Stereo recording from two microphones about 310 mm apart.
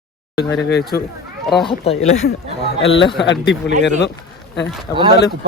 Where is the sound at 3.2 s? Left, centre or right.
Left.